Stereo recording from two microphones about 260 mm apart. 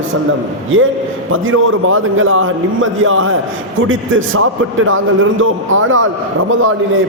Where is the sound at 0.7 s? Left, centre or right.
Right.